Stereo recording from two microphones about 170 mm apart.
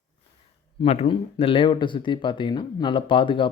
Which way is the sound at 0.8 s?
35° left (ahead or behind).